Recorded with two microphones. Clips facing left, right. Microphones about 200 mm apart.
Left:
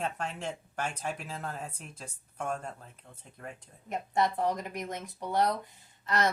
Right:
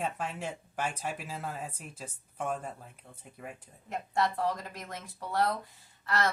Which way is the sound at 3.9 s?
20° left (ahead or behind).